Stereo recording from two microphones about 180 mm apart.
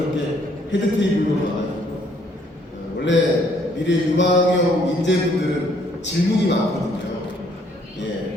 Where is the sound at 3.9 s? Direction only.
80° left.